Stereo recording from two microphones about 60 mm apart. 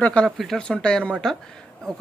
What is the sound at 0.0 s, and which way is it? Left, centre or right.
Speech, left.